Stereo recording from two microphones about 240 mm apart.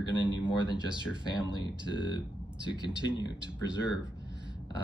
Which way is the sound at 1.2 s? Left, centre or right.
Centre.